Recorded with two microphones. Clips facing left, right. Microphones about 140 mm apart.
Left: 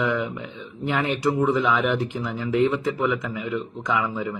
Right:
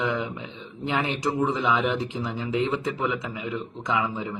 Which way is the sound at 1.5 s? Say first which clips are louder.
Left 3 dB; 25° right (ahead or behind).